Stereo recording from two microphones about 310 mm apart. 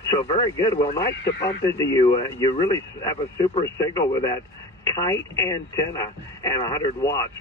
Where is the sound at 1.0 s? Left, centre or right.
Left.